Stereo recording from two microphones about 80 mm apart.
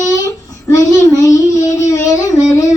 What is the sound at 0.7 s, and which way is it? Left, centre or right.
Child singing, left.